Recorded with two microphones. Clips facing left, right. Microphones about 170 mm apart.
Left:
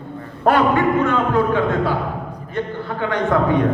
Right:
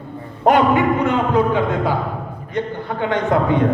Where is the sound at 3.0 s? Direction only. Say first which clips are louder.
Even; 20° right (ahead or behind).